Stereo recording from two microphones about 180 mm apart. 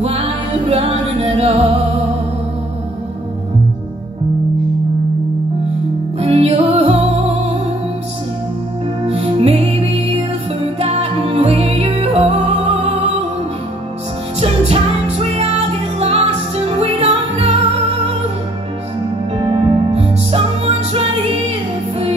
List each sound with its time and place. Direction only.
0.0 s music: 35° right (ahead or behind)
6.1 s music: 35° right (ahead or behind)
9.0 s music: 35° right (ahead or behind)
14.4 s music: 35° right (ahead or behind)
19.4 s music: 35° right (ahead or behind)